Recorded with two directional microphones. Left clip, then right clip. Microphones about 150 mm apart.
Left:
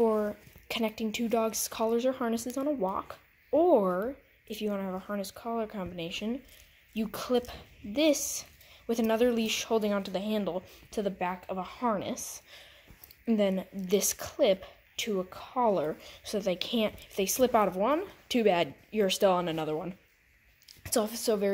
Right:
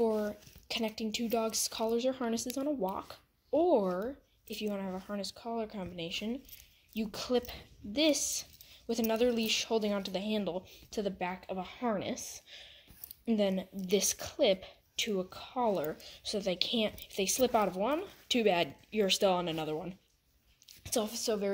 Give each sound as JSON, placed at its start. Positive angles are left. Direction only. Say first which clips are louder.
{"t": 0.0, "sound": "a woman's voice", "louder": "left 4 dB", "side_deg": 20}
{"t": 15.7, "sound": "a woman's voice", "louder": "left 4 dB", "side_deg": 20}